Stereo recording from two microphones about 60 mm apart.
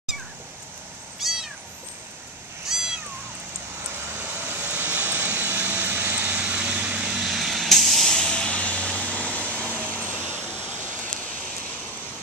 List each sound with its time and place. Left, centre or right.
1.2 s cat: centre
2.7 s cat: centre
4.2 s vehicle: right; by 7.2 s centre
7.2 s vehicle: centre; by 10.1 s left